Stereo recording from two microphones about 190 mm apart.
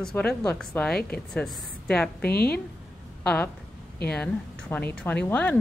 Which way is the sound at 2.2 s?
55° left (ahead or behind).